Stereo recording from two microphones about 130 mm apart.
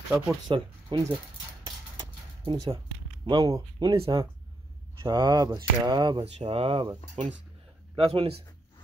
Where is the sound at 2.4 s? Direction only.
40° right (ahead or behind).